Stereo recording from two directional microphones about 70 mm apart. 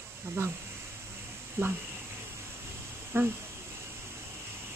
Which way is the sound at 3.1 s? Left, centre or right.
Right.